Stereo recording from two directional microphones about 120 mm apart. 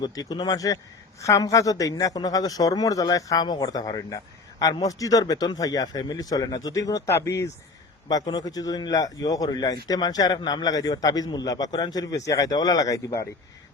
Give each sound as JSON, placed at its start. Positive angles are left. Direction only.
{"t": 0.0, "sound": "a man's voice", "side_deg": 35}